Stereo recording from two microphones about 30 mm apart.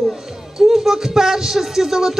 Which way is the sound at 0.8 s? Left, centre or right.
Right.